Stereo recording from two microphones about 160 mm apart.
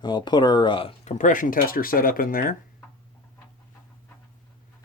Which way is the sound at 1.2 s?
55° left (ahead or behind).